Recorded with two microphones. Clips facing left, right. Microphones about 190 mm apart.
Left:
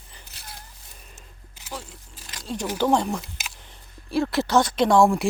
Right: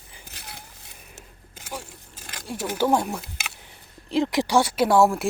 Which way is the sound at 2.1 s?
50° right (ahead or behind).